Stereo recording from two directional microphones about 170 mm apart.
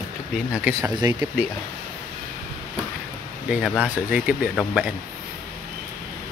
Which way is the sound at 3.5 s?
Centre (ahead or behind).